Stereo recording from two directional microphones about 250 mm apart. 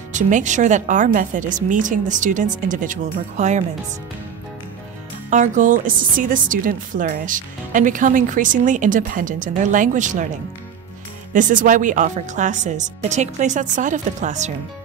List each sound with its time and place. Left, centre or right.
0.1 s a woman's voice: right
5.3 s a woman's voice: right
11.3 s a woman's voice: right